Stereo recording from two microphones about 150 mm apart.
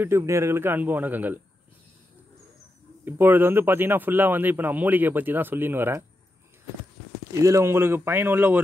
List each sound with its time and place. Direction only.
0.0 s speech: 20° right (ahead or behind)
3.1 s speech: 15° right (ahead or behind)
7.4 s speech: 20° right (ahead or behind)